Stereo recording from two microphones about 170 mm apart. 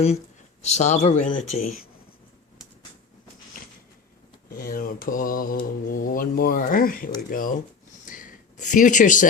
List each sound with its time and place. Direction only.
0.6 s a man's voice: 45° left (ahead or behind)
4.4 s mantra: 60° left (ahead or behind)
7.3 s a man's voice: 55° left (ahead or behind)
8.0 s a sound: 50° left (ahead or behind)